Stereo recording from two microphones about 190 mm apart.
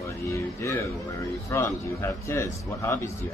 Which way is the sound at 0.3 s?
15° left (ahead or behind).